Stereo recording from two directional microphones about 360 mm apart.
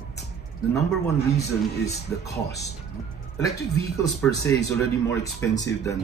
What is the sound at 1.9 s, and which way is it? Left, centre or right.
Speech, left.